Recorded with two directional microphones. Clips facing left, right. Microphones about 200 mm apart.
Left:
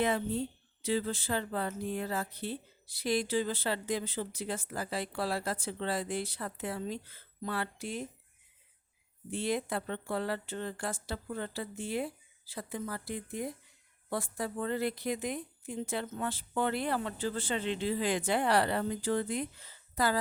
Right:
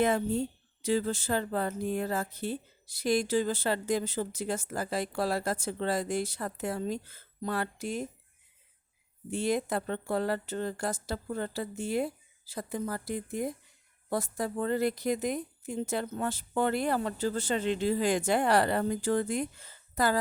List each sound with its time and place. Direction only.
0.0 s a woman's voice: 45° right (ahead or behind)
9.3 s a woman's voice: 45° right (ahead or behind)